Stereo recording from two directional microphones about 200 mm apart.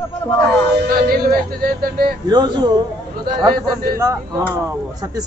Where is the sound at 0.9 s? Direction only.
45° right (ahead or behind).